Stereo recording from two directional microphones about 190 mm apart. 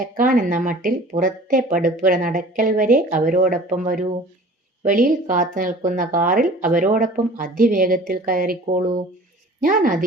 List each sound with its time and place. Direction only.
0.0 s a woman's voice: 45° right (ahead or behind)